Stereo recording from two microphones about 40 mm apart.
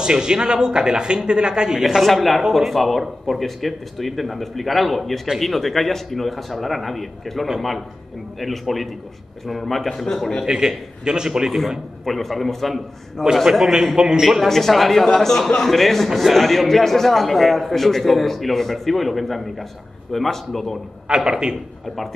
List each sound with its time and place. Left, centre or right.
0.0 s a man's voice: centre
2.0 s a man's voice: centre
10.4 s a man's voice: centre
12.0 s a man's voice: centre
14.4 s speech: centre
21.1 s a man's voice: centre
21.8 s speech: centre